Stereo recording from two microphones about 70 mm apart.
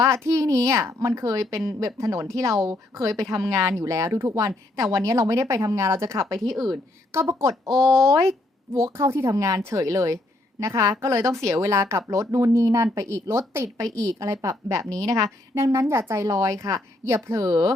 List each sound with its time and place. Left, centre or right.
0.0 s a woman's voice: right
6.4 s speech: centre
7.1 s a woman's voice: right
7.7 s speech: centre
8.1 s a woman's voice: right
16.2 s a woman's voice: right